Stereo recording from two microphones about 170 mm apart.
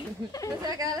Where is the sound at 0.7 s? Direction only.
20° right (ahead or behind).